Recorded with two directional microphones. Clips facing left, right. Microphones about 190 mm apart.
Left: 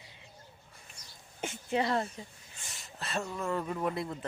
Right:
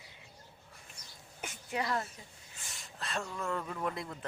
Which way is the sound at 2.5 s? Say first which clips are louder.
Left 1 dB; 5° left (ahead or behind).